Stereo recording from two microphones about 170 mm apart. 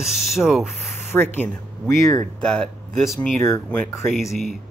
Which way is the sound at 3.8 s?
Centre (ahead or behind).